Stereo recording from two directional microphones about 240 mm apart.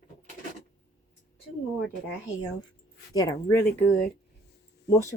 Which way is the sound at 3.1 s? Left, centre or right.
Centre.